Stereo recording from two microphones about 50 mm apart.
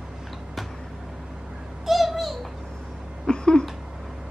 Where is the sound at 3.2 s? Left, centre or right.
Centre.